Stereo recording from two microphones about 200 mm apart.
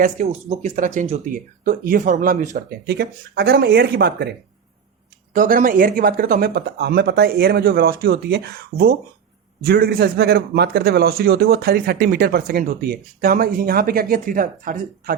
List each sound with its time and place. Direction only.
0.3 s a man's voice: 30° right (ahead or behind); by 4.4 s 55° right (ahead or behind)
5.3 s a man's voice: 40° right (ahead or behind)